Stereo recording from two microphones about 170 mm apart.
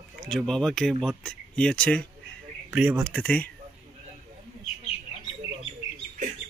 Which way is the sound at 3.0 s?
5° left (ahead or behind).